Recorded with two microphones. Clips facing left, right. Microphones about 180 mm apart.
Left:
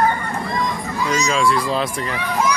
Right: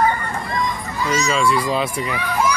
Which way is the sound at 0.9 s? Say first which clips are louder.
Even; centre (ahead or behind).